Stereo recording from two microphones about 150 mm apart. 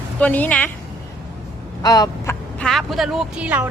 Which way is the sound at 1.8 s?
25° left (ahead or behind).